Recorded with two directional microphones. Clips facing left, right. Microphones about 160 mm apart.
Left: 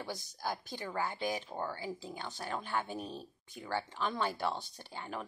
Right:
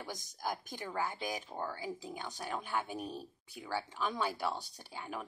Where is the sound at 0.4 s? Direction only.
15° right (ahead or behind).